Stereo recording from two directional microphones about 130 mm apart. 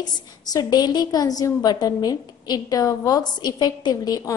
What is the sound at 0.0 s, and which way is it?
A woman's voice, 30° left (ahead or behind).